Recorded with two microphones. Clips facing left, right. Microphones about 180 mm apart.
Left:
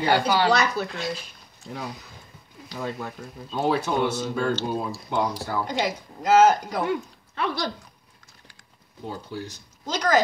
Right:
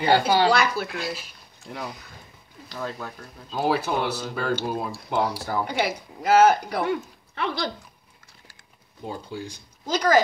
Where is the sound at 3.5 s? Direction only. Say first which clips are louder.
Even; 5° right (ahead or behind).